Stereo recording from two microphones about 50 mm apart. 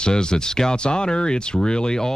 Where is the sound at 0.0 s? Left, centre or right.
Centre.